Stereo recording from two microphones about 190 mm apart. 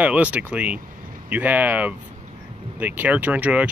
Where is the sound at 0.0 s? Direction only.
5° right (ahead or behind).